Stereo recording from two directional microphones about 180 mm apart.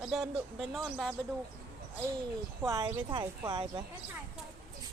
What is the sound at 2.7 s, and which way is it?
Speech, 25° right (ahead or behind).